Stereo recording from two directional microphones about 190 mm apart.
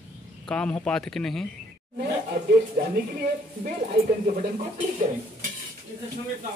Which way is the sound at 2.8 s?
50° right (ahead or behind).